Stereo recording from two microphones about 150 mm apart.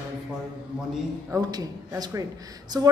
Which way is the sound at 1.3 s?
25° right (ahead or behind).